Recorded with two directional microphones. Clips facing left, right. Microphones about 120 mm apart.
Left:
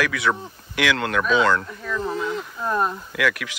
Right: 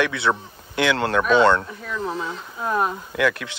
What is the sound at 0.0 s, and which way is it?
Speech, 30° right (ahead or behind).